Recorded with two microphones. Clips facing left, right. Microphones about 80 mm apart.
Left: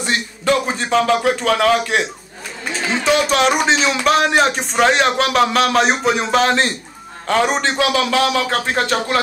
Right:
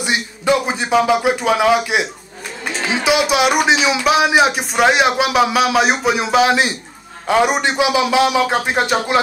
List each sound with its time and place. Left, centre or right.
0.0 s a man's voice: centre